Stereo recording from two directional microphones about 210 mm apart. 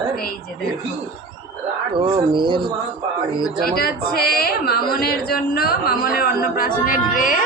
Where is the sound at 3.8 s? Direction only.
45° left (ahead or behind).